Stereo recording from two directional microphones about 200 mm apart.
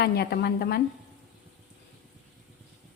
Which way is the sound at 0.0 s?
55° left (ahead or behind).